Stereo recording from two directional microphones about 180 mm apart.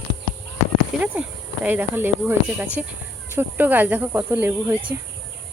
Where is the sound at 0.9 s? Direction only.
5° right (ahead or behind).